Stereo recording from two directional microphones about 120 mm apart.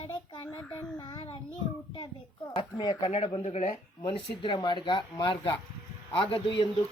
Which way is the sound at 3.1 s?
65° left (ahead or behind).